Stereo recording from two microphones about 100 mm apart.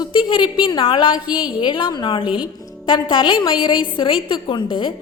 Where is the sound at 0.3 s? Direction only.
55° left (ahead or behind).